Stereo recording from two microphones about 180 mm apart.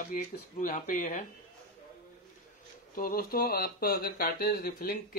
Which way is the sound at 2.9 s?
55° left (ahead or behind).